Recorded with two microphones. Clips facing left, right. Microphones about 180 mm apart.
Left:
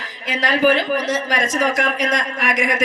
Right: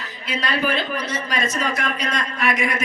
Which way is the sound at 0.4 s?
90° left.